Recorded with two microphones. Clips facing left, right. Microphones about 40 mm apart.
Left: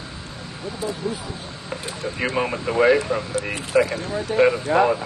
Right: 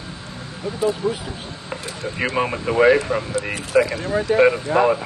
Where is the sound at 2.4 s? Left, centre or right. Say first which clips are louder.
Right 2 dB; right.